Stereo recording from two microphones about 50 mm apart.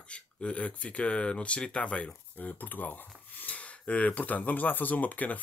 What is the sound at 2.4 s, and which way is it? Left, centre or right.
Speech, left.